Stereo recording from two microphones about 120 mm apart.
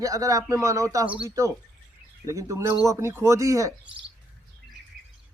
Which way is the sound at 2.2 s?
25° right (ahead or behind).